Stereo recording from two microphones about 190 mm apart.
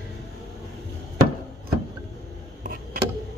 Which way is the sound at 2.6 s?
45° right (ahead or behind).